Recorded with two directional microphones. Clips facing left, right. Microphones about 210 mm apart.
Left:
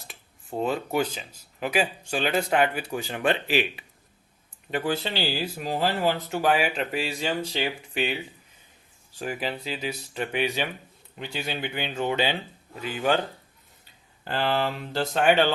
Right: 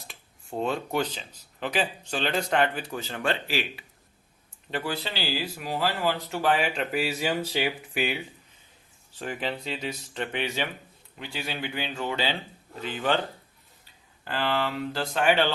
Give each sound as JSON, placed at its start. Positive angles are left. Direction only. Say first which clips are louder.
{"t": 0.1, "sound": "speech", "louder": "left 1 dB", "side_deg": 0}
{"t": 9.1, "sound": "speech", "louder": "left 1 dB", "side_deg": 10}
{"t": 14.3, "sound": "speech", "louder": "left 2 dB", "side_deg": 35}
{"t": 14.9, "sound": "speech", "louder": "left 3 dB", "side_deg": 20}